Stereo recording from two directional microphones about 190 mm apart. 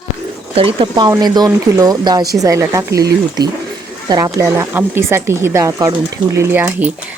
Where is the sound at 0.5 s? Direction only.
30° right (ahead or behind).